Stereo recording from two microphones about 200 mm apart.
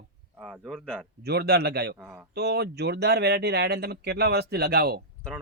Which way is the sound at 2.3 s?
55° right (ahead or behind).